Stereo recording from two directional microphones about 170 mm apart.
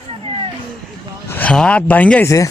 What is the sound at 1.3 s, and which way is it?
Speech, 5° left (ahead or behind).